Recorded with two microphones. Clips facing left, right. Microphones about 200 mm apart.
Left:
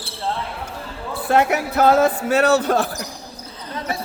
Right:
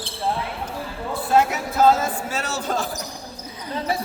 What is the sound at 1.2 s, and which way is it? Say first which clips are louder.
Speech: left 2 dB; 65° left (ahead or behind).